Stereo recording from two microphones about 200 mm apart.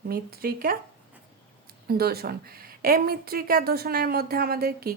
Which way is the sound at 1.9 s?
50° right (ahead or behind).